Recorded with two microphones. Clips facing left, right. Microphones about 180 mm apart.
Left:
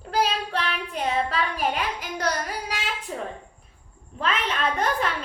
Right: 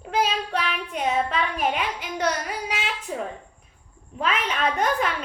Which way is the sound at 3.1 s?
10° right (ahead or behind).